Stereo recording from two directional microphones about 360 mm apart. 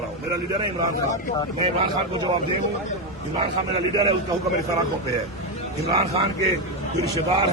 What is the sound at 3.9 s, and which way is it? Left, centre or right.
Speech, centre.